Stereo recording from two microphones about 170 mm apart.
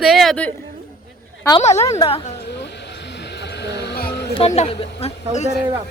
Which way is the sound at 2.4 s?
90° left.